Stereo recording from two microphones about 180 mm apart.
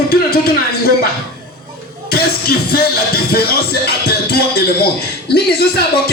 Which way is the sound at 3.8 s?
60° left (ahead or behind).